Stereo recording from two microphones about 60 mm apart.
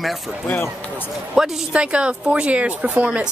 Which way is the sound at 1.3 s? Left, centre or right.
Centre.